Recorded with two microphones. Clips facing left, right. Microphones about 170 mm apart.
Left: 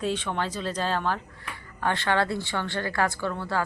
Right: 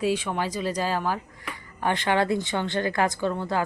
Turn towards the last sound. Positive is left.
turn(degrees=-20)  # may be behind; listen again after turning